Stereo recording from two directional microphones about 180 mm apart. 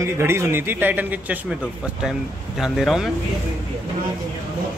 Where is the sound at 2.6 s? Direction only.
Centre (ahead or behind).